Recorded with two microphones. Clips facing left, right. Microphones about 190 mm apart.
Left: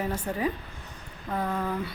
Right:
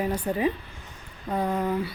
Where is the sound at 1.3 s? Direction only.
20° right (ahead or behind).